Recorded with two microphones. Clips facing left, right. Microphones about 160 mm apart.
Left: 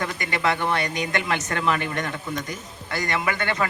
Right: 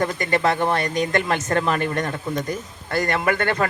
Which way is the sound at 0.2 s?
40° right (ahead or behind).